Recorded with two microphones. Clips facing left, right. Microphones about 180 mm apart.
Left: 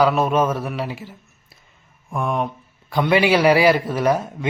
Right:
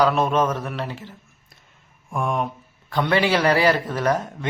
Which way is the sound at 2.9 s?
10° left (ahead or behind).